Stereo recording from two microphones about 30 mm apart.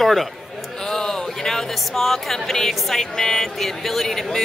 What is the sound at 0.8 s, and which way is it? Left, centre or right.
A woman's voice, centre.